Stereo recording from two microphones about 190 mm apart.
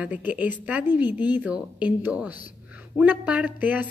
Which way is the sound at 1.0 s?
20° left (ahead or behind).